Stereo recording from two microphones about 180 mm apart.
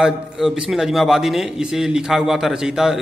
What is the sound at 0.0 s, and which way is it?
A man's voice, centre (ahead or behind).